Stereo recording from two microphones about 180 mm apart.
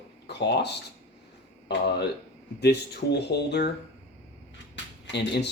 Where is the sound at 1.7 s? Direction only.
65° left (ahead or behind).